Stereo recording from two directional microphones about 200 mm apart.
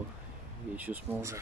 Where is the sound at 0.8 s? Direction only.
10° right (ahead or behind).